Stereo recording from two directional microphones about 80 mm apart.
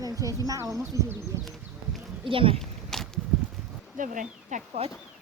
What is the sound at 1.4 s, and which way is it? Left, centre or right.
Horse, centre.